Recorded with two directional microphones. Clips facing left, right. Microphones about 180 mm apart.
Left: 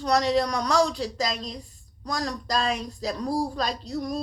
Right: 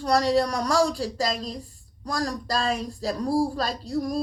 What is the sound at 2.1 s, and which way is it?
Speech, 35° right (ahead or behind).